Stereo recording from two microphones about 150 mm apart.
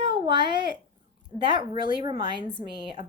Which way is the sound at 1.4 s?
30° right (ahead or behind).